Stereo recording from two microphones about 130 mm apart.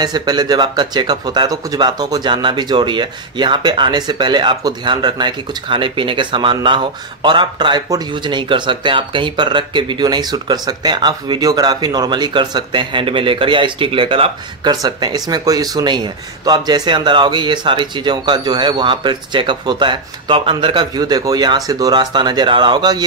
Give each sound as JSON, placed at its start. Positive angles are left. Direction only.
{"t": 0.0, "sound": "speech", "side_deg": -30}